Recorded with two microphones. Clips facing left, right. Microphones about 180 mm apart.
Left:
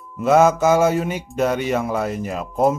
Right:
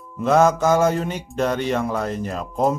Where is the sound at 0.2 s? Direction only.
5° left (ahead or behind).